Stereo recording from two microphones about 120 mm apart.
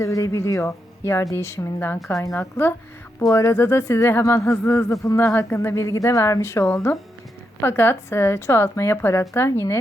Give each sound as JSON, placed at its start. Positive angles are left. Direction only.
{"t": 0.0, "sound": "speech", "side_deg": 25}